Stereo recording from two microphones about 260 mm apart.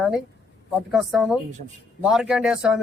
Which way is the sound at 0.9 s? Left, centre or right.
Centre.